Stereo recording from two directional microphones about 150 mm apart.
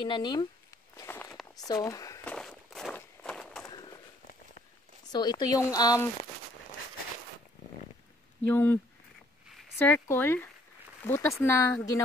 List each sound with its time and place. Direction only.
0.0 s speech: 30° left (ahead or behind)
0.9 s walk: 15° left (ahead or behind)
1.3 s a sound: centre (ahead or behind)
1.7 s speech: 25° left (ahead or behind)
2.2 s walk: centre (ahead or behind)
5.1 s speech: 25° left (ahead or behind)
8.5 s speech: 10° left (ahead or behind)
9.8 s speech: 15° left (ahead or behind)